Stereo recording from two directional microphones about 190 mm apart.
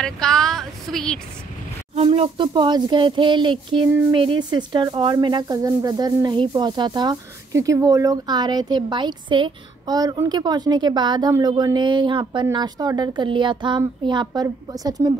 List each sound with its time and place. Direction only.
0.0 s speech: 5° left (ahead or behind)
2.0 s a woman's voice: 30° right (ahead or behind)